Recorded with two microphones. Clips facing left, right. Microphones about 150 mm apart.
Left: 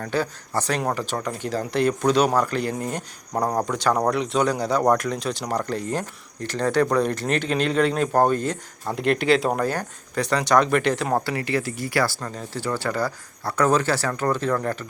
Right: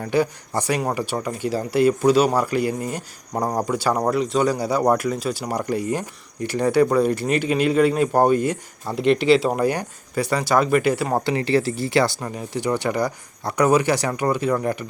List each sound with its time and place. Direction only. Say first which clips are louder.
0.0 s speech: right 5 dB; 15° right (ahead or behind)
11.3 s speech: right 5 dB; 25° right (ahead or behind)